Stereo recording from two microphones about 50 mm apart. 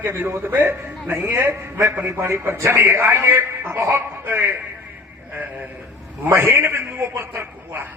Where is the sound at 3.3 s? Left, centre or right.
Right.